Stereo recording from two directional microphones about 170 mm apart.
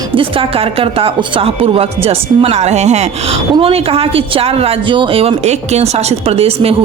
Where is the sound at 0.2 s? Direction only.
30° right (ahead or behind).